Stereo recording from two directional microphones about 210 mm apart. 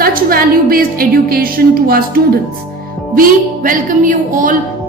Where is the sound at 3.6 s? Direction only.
40° right (ahead or behind).